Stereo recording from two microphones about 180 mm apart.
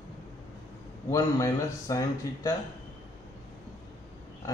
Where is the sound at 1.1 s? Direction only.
20° left (ahead or behind).